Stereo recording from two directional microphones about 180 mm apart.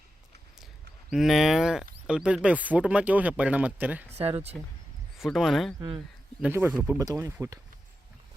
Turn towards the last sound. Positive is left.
turn(degrees=-15)  # may be behind; listen again after turning